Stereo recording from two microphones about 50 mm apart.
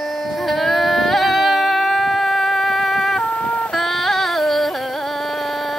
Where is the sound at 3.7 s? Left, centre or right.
Centre.